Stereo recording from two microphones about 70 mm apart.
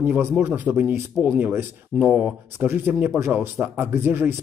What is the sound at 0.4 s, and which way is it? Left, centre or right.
A man's voice, right.